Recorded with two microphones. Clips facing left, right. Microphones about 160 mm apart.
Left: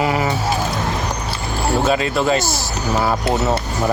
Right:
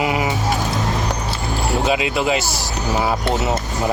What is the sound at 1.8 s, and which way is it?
Speech, 10° right (ahead or behind).